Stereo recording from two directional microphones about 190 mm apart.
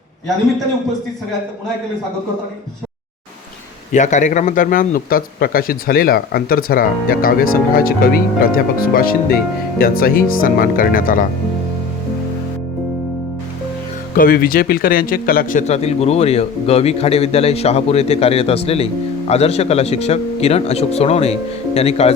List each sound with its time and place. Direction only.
3.9 s speech: 40° left (ahead or behind)
14.2 s a man's voice: 50° left (ahead or behind); by 22.1 s 35° left (ahead or behind)